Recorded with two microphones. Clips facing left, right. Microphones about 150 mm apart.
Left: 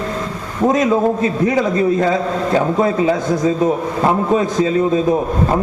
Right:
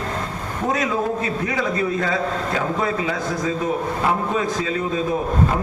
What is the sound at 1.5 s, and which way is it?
A man's voice, 35° left (ahead or behind).